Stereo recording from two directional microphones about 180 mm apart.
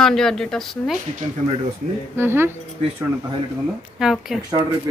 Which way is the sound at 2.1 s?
15° right (ahead or behind).